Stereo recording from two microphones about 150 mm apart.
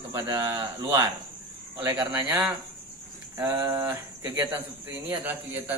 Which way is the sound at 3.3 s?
20° right (ahead or behind).